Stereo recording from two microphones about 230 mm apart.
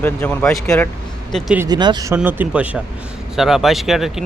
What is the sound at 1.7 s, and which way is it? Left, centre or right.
Speech, centre.